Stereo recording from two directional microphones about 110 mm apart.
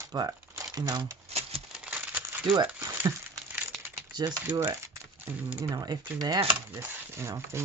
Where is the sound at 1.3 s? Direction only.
70° right (ahead or behind).